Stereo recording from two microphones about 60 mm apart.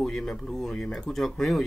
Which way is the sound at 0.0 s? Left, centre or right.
Centre.